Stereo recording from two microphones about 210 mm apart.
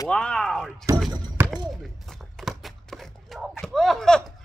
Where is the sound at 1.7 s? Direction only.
Centre (ahead or behind).